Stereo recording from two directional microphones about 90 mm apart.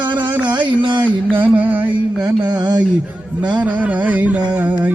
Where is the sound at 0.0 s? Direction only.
60° right (ahead or behind).